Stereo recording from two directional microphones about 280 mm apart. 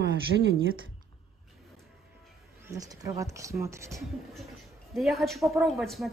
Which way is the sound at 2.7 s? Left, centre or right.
Centre.